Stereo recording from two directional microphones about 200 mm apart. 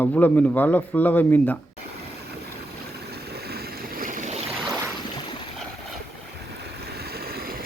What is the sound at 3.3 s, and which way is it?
Boat, 50° right (ahead or behind).